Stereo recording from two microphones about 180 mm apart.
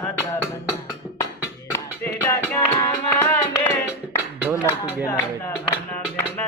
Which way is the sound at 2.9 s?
15° left (ahead or behind).